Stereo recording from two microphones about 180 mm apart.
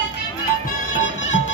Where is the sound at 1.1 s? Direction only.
40° left (ahead or behind).